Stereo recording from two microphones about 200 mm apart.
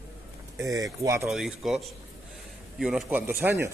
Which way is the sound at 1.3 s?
Centre (ahead or behind).